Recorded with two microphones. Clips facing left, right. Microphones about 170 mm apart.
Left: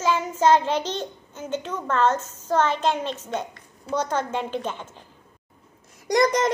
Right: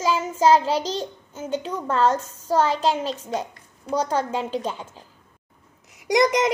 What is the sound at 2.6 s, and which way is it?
Speech, 35° right (ahead or behind).